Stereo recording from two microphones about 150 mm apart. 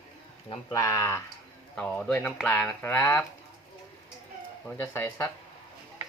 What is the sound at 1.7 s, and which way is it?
Speech, 5° left (ahead or behind).